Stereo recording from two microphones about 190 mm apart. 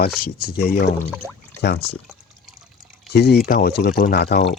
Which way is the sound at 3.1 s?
60° left (ahead or behind).